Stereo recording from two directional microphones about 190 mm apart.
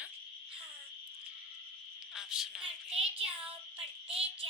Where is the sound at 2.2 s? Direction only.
5° right (ahead or behind).